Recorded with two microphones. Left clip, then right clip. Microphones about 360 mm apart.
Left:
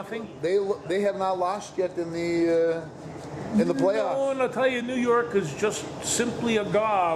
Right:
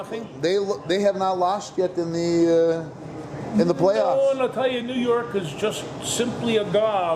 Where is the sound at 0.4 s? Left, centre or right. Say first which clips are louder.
Right 3 dB; right.